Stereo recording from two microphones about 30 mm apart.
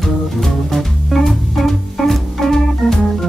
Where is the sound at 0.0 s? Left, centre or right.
Centre.